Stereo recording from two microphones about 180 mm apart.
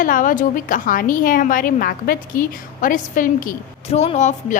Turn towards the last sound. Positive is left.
turn(degrees=40)  # may be behind; listen again after turning